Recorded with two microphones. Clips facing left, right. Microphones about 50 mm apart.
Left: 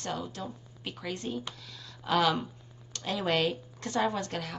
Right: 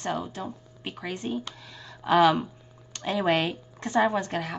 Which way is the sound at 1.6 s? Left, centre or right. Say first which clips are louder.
Right 8 dB; right.